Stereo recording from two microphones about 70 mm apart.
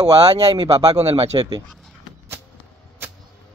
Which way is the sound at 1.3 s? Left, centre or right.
Right.